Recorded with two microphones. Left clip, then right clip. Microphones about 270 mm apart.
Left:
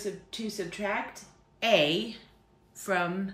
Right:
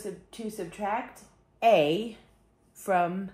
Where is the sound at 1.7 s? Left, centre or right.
Centre.